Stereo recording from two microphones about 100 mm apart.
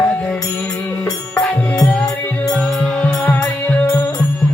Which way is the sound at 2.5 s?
15° left (ahead or behind).